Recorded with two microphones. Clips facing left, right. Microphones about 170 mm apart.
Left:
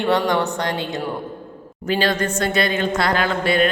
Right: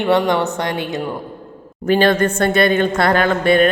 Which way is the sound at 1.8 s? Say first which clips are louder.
Right 6 dB; 55° right (ahead or behind).